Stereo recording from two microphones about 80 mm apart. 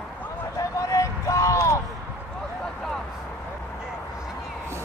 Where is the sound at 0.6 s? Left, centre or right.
Left.